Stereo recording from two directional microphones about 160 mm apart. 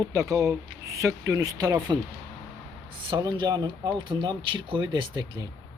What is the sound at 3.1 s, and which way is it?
Speech, 30° right (ahead or behind).